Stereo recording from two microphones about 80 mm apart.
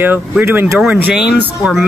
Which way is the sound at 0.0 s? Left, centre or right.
Right.